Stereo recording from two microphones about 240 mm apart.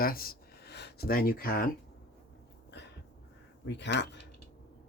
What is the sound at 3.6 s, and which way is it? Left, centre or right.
Speech, left.